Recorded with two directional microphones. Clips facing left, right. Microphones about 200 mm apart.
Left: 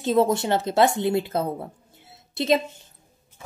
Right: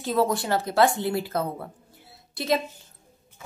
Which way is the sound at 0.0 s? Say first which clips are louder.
Left 4 dB; 20° left (ahead or behind).